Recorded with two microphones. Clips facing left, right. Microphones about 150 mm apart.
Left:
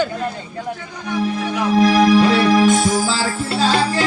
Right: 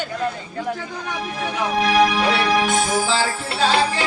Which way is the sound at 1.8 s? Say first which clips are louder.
Left 5 dB; 40° left (ahead or behind).